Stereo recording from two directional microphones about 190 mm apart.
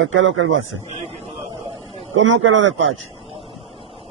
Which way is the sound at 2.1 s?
90° right.